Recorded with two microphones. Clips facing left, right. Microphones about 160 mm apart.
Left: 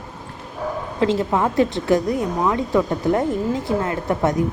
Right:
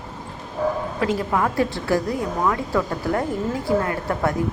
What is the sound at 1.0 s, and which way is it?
Speech, 25° left (ahead or behind).